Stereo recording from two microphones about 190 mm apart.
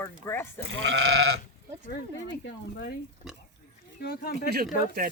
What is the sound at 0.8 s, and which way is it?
Goat, 90° right.